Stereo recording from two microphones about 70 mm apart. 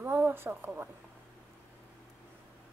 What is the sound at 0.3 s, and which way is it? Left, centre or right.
Speech, right.